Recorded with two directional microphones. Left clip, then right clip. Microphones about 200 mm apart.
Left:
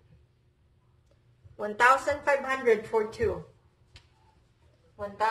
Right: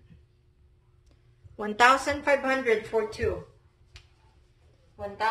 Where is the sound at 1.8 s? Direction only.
40° right (ahead or behind).